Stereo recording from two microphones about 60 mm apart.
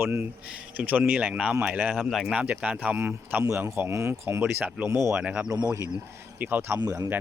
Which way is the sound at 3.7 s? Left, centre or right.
Right.